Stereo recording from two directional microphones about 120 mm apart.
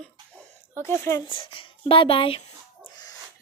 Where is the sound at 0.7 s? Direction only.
20° left (ahead or behind).